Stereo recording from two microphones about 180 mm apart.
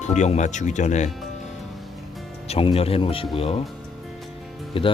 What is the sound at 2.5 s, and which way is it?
Speech, 30° left (ahead or behind).